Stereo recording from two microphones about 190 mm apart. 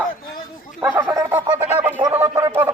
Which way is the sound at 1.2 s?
10° right (ahead or behind).